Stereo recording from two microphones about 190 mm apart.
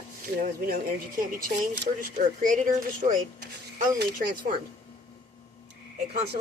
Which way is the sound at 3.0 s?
45° right (ahead or behind).